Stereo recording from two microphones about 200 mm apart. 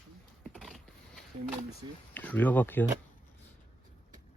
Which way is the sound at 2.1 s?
10° left (ahead or behind).